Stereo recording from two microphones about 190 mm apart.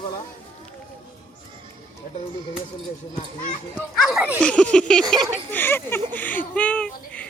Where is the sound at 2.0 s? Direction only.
50° left (ahead or behind).